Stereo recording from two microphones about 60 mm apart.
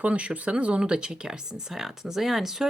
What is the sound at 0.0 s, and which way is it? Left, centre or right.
Speech, right.